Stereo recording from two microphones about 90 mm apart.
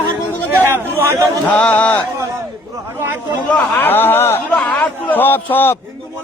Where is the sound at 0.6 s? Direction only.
25° right (ahead or behind).